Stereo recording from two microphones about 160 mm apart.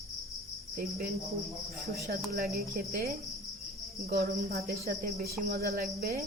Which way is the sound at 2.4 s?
75° right (ahead or behind).